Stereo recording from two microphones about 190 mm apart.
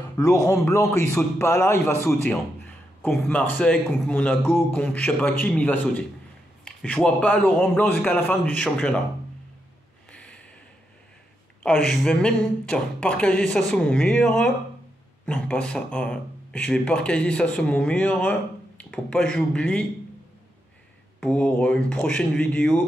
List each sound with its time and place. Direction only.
0.2 s a man's voice: 15° left (ahead or behind)
10.1 s snort: 5° left (ahead or behind)
11.6 s speech: centre (ahead or behind)
21.2 s speech: 5° left (ahead or behind)